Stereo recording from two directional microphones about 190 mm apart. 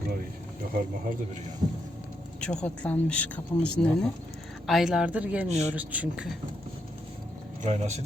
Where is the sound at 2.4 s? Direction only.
5° left (ahead or behind).